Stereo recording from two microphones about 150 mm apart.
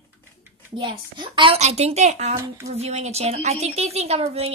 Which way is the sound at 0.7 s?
30° right (ahead or behind).